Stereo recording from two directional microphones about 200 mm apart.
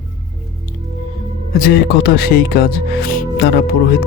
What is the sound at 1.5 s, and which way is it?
Speech, 50° left (ahead or behind).